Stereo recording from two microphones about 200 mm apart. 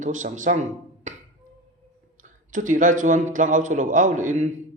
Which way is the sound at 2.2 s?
40° right (ahead or behind).